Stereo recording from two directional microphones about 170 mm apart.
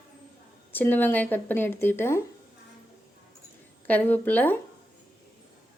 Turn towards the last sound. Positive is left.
turn(degrees=10)  # may be behind; listen again after turning